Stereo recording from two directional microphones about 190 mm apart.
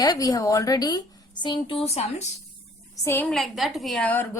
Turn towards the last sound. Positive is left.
turn(degrees=10)  # may be behind; listen again after turning